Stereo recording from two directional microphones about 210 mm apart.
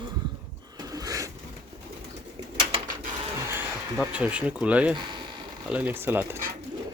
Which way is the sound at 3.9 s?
5° right (ahead or behind).